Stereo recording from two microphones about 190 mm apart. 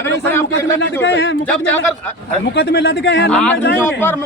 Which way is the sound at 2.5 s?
60° left (ahead or behind).